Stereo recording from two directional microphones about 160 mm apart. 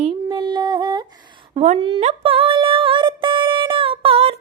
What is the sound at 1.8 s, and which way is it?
Music, 35° right (ahead or behind).